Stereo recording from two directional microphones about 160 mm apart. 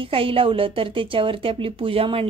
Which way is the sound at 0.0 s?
35° right (ahead or behind).